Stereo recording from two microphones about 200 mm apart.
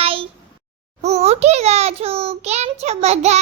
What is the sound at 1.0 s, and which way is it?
A child's voice, 30° right (ahead or behind).